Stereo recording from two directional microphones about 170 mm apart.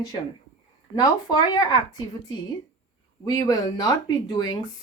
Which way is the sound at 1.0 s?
25° left (ahead or behind).